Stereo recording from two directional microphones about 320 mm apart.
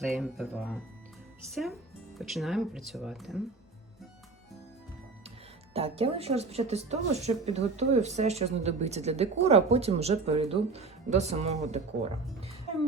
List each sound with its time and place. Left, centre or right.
0.0 s speech: centre
5.7 s speech: centre